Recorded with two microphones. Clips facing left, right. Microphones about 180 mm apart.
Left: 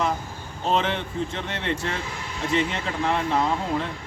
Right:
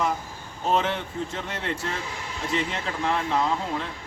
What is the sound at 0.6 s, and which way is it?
Speech, 10° right (ahead or behind).